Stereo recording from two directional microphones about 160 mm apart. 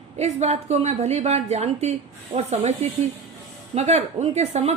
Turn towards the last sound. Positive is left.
turn(degrees=-45)  # may be behind; listen again after turning